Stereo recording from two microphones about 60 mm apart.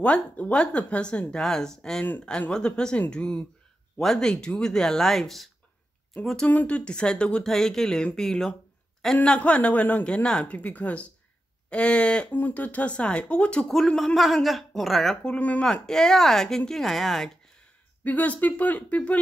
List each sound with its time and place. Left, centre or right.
0.0 s speech: left
1.3 s speech: centre
6.5 s speech: left
10.0 s speech: centre
12.3 s speech: left
13.7 s speech: centre
15.3 s speech: left
15.6 s speech: centre
18.0 s speech: left